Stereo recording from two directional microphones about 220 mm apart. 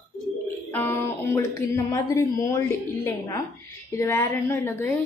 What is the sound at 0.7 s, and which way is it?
Speech, 10° left (ahead or behind).